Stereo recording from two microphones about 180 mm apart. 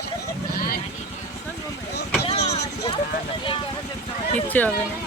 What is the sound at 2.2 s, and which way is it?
Vehicle, 35° left (ahead or behind).